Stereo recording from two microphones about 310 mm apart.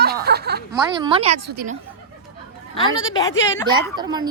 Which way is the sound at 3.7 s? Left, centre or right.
Centre.